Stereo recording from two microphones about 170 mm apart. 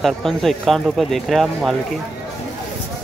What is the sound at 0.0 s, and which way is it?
Speech, centre (ahead or behind).